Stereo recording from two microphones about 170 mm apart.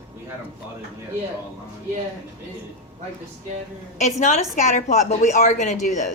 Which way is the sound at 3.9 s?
45° left (ahead or behind).